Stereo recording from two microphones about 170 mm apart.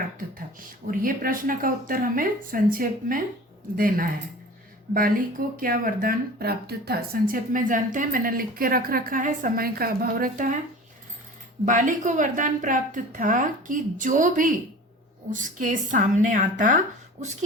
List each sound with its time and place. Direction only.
0.9 s speech: 55° right (ahead or behind)
5.5 s speech: 55° right (ahead or behind)
11.6 s a woman's voice: 50° right (ahead or behind)